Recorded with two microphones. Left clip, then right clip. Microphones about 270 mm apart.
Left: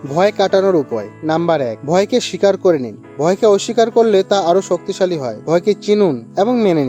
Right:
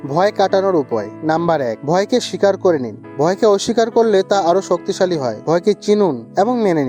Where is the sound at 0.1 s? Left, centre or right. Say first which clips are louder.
Left 1 dB; right.